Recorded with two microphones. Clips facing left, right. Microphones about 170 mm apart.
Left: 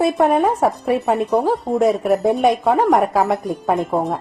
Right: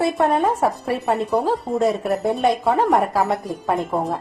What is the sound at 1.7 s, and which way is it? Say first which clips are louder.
Speech: left 5 dB; 5° left (ahead or behind).